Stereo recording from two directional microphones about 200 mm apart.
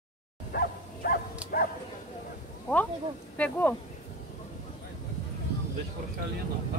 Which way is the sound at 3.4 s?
10° left (ahead or behind).